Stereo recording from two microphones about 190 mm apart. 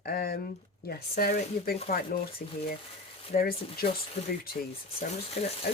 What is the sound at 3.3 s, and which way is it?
Speech, 50° left (ahead or behind).